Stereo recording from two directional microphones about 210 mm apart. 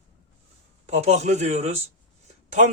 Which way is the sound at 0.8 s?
30° right (ahead or behind).